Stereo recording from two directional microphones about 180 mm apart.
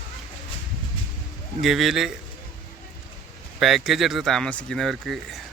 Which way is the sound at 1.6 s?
Centre (ahead or behind).